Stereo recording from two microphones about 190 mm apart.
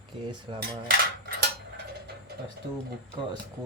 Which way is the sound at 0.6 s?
55° right (ahead or behind).